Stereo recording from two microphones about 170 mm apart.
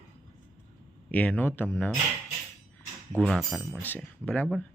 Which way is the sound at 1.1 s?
10° left (ahead or behind).